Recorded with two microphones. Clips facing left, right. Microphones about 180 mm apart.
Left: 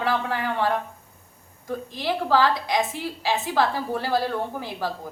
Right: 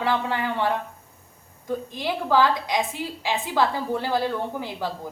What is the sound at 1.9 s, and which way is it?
A woman's voice, 20° right (ahead or behind).